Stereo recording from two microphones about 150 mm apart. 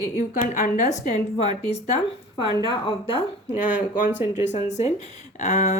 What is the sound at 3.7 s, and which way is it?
Speech, 55° left (ahead or behind).